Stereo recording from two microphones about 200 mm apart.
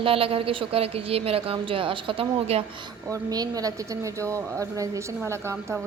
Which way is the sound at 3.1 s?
20° right (ahead or behind).